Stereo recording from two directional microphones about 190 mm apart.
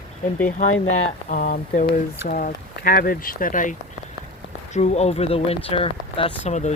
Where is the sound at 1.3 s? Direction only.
45° left (ahead or behind).